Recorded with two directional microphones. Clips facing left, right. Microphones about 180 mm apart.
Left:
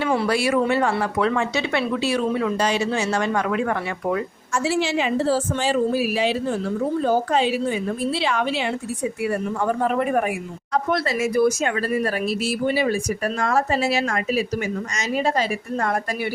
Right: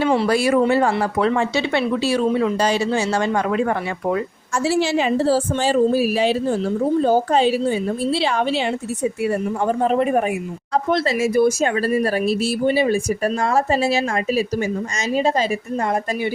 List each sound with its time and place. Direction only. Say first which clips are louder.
0.3 s speech: right 3 dB; 40° right (ahead or behind); by 15.4 s 25° right (ahead or behind)